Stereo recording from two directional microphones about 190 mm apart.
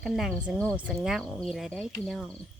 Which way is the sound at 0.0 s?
Centre (ahead or behind).